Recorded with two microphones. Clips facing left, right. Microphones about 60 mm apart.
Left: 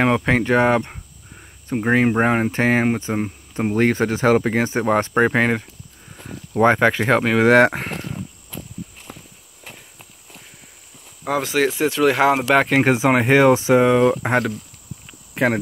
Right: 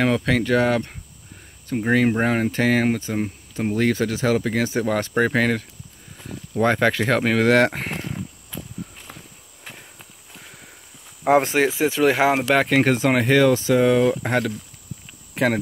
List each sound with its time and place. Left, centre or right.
0.0 s speech: left
7.4 s speech: left
11.2 s speech: right
11.8 s speech: centre
12.4 s speech: centre